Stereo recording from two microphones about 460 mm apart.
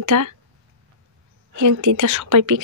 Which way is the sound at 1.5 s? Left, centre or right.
Right.